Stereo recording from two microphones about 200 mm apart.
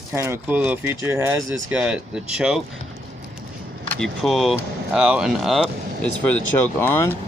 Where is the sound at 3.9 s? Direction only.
Centre (ahead or behind).